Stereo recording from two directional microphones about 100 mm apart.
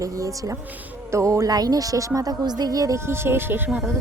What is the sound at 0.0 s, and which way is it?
A woman's voice, 35° right (ahead or behind).